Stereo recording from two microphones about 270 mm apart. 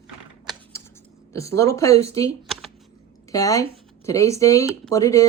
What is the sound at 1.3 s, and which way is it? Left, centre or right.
Speech, centre.